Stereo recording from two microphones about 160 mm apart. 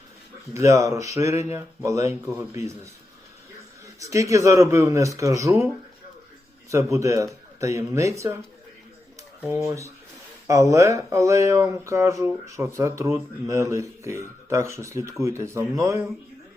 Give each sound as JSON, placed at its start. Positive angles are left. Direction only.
{"t": 0.5, "sound": "speech", "side_deg": -20}
{"t": 4.0, "sound": "speech", "side_deg": -20}
{"t": 6.7, "sound": "speech", "side_deg": -20}
{"t": 9.6, "sound": "speech", "side_deg": -20}